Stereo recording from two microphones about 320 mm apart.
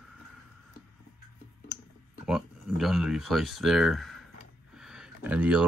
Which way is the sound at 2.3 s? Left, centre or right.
Centre.